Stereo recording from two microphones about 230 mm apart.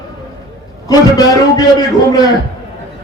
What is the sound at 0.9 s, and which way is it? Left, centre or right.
Speech, centre.